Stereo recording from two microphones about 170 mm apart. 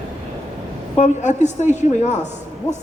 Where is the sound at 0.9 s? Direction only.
45° left (ahead or behind).